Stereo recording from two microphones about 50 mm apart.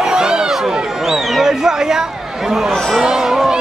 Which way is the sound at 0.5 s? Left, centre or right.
Centre.